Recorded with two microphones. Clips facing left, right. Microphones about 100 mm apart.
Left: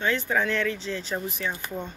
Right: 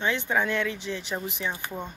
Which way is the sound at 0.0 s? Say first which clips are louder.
Left 1 dB; 20° right (ahead or behind).